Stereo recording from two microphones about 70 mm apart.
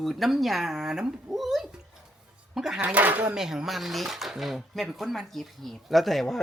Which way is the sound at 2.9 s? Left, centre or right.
Right.